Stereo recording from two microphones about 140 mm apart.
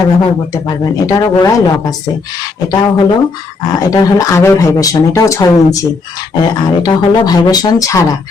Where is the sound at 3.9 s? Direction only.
20° left (ahead or behind).